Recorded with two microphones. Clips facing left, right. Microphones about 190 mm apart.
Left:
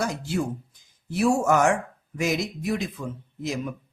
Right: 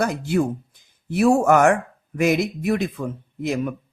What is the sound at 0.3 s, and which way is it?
Speech, 60° right (ahead or behind).